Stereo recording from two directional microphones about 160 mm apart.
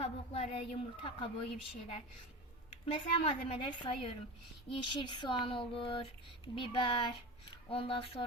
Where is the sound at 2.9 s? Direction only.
35° left (ahead or behind).